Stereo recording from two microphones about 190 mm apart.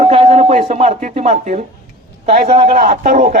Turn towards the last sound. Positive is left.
turn(degrees=-45)  # may be behind; listen again after turning